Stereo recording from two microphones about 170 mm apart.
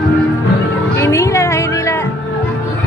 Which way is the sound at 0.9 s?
15° left (ahead or behind).